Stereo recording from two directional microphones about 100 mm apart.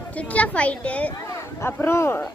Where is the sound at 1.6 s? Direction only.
25° left (ahead or behind).